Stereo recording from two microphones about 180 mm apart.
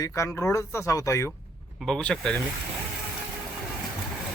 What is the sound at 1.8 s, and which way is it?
Speech, 5° left (ahead or behind).